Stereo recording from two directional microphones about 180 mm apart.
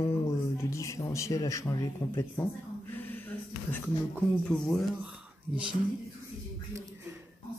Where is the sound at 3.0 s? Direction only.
10° left (ahead or behind).